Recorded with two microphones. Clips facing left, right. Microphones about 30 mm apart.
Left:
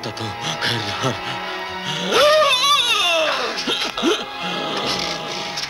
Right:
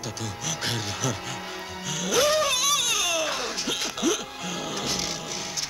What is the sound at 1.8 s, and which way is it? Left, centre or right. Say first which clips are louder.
Music: left 8 dB; left.